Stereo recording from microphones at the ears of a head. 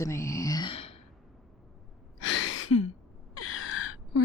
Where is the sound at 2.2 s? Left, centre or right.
Left.